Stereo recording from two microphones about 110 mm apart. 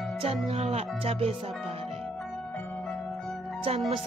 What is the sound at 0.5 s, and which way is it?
Speech, 70° right (ahead or behind).